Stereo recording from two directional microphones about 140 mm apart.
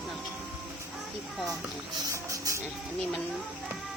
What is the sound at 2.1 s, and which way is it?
Speech, 25° right (ahead or behind).